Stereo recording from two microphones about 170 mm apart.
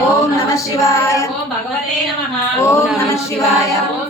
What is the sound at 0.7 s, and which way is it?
Female singing, 15° left (ahead or behind).